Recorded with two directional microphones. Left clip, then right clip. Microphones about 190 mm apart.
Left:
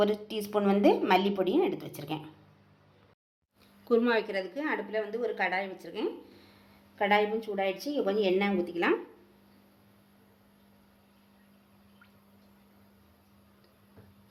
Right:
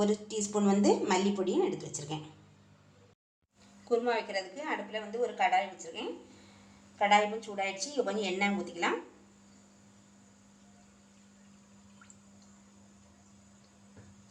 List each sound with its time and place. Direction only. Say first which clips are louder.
0.5 s a woman's voice: left 3 dB; 35° left (ahead or behind)
3.8 s a woman's voice: left 4 dB; 55° left (ahead or behind)